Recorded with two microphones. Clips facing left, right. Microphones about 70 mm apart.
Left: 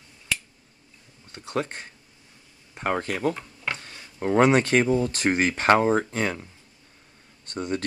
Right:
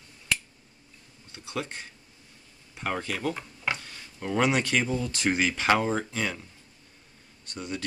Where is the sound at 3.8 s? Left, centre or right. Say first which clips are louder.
Left 7 dB; left.